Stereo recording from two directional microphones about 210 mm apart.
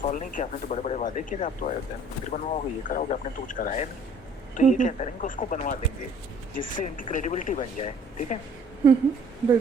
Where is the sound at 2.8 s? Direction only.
35° left (ahead or behind).